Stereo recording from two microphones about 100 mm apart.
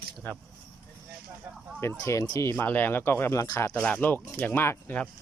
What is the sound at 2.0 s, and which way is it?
Speech, 30° left (ahead or behind).